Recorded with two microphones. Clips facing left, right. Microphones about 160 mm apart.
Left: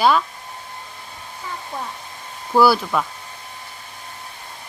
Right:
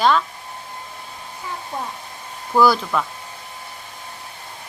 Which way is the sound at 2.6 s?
5° left (ahead or behind).